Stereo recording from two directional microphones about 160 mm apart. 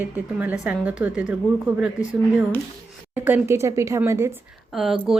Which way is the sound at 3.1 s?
10° right (ahead or behind).